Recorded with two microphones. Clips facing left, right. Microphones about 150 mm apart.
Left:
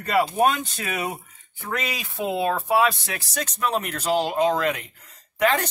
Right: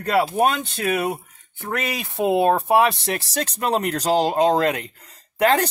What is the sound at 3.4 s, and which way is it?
Speech, 35° right (ahead or behind).